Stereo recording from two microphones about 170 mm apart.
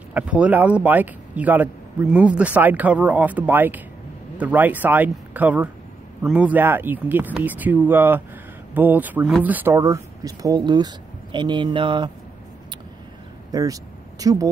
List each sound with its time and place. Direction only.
0.1 s speech: 10° right (ahead or behind); by 12.1 s 30° right (ahead or behind)
13.5 s speech: 20° right (ahead or behind)